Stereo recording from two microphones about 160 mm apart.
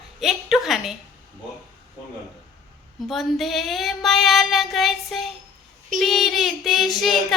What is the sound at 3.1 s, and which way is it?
Child singing, centre (ahead or behind).